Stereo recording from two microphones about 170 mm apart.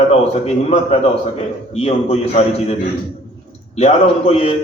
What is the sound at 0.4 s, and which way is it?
A man's voice, 40° left (ahead or behind).